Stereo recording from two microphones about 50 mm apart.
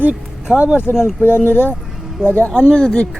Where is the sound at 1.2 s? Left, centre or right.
Left.